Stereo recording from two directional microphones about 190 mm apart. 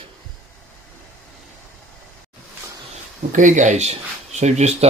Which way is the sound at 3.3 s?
40° right (ahead or behind).